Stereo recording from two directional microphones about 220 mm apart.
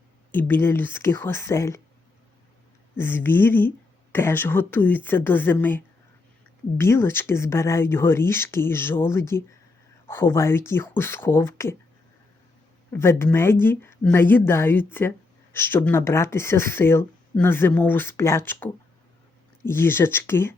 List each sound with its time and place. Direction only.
0.3 s speech: 10° left (ahead or behind)
2.9 s speech: 10° left (ahead or behind)
12.9 s speech: 10° left (ahead or behind)